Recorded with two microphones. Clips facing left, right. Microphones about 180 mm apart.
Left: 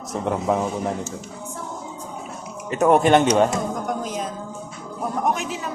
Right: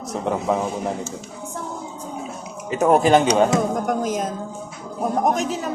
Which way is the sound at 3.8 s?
50° right (ahead or behind).